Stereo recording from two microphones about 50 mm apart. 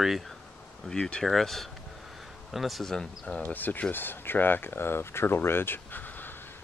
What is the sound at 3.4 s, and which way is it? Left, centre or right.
Speech, left.